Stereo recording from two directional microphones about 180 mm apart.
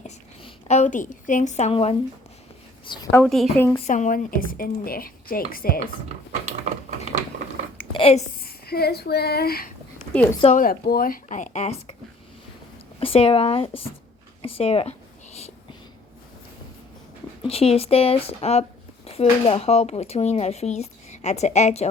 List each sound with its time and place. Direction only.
0.4 s a woman's voice: 40° left (ahead or behind)
3.2 s a woman's voice: 5° left (ahead or behind)
3.8 s a woman's voice: 45° left (ahead or behind)
7.9 s a woman's voice: 35° left (ahead or behind)
8.4 s speech: 60° left (ahead or behind)
10.1 s a woman's voice: 5° left (ahead or behind)
10.4 s a woman's voice: 45° left (ahead or behind)
13.0 s speech: 30° left (ahead or behind)
14.4 s a sound: 35° left (ahead or behind)
17.4 s speech: 35° left (ahead or behind)